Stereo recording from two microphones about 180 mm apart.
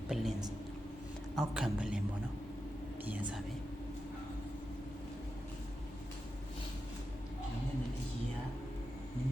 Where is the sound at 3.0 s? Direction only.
10° right (ahead or behind).